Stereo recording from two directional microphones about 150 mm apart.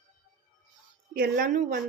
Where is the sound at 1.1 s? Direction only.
75° right (ahead or behind).